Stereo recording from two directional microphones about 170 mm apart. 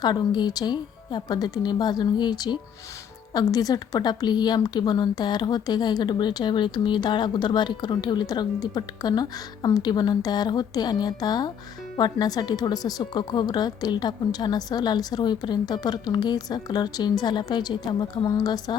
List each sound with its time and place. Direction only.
0.0 s speech: 25° left (ahead or behind)